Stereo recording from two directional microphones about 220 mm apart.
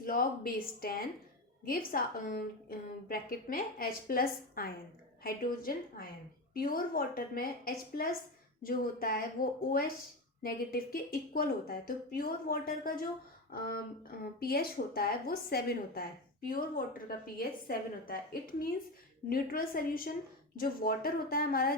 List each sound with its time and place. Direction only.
0.0 s a woman's voice: 40° left (ahead or behind)
19.3 s a woman's voice: 40° left (ahead or behind)